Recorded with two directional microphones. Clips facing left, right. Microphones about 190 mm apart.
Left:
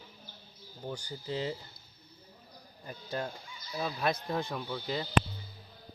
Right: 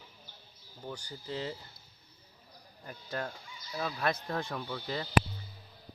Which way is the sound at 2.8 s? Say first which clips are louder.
Left 1 dB; 20° left (ahead or behind).